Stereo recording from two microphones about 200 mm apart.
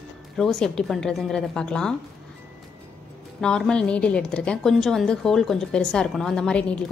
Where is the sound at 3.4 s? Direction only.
5° left (ahead or behind).